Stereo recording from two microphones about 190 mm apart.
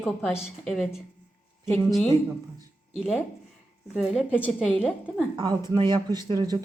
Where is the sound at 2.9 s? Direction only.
Centre (ahead or behind).